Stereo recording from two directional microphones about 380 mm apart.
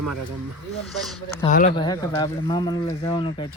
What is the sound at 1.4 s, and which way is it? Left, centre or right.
Speech, left.